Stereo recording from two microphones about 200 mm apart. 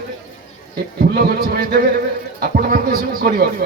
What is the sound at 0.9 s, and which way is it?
Speech, 50° right (ahead or behind).